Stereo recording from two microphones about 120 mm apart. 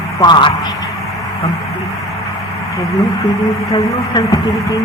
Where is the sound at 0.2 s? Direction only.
40° left (ahead or behind).